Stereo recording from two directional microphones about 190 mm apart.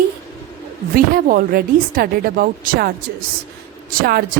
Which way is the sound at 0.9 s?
50° right (ahead or behind).